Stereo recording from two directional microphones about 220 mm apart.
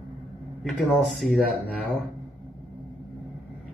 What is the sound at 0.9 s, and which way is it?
Speech, centre (ahead or behind).